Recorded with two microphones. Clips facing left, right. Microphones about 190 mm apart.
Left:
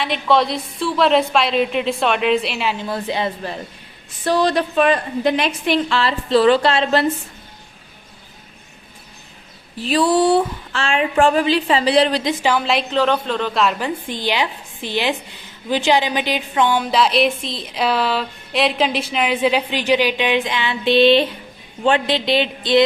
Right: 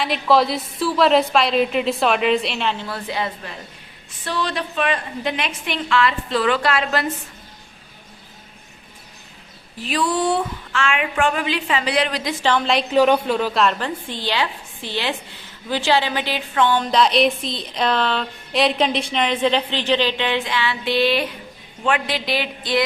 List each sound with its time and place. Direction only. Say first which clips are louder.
0.0 s a woman's voice: even; centre (ahead or behind)
2.7 s speech: left 4 dB; 20° left (ahead or behind)
4.2 s a woman's voice: left 8 dB; 40° left (ahead or behind)
9.7 s a woman's voice: left 6 dB; 30° left (ahead or behind)
12.3 s a woman's voice: left 2 dB; 15° left (ahead or behind)
12.5 s a woman's voice: even; centre (ahead or behind)
12.9 s a woman's voice: right 5 dB; 10° right (ahead or behind); by 22.8 s 25° left (ahead or behind)